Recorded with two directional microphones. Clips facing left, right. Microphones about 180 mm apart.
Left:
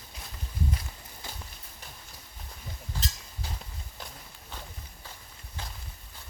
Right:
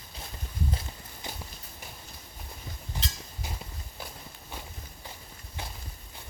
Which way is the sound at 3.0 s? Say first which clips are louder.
Even; 20° right (ahead or behind).